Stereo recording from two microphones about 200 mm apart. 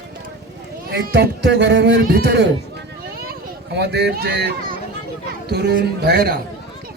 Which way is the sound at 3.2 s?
55° right (ahead or behind).